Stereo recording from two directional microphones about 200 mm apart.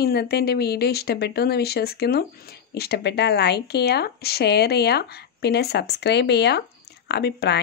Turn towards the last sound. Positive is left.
turn(degrees=55)  # may be behind; listen again after turning